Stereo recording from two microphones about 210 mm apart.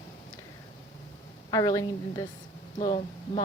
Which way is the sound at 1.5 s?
15° left (ahead or behind).